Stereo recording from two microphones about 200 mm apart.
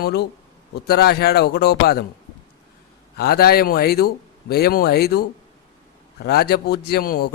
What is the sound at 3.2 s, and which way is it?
Speech, 50° left (ahead or behind).